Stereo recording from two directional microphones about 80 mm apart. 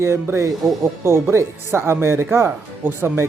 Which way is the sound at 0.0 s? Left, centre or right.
Right.